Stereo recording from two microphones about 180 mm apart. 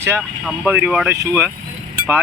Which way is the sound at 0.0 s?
15° right (ahead or behind).